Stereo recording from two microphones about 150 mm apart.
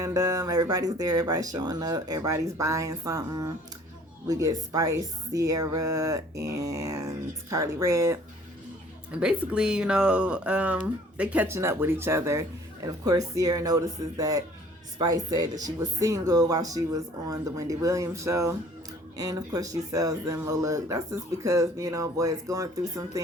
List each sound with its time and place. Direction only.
0.0 s speech: 25° right (ahead or behind)
9.1 s speech: 5° right (ahead or behind); by 23.2 s 20° right (ahead or behind)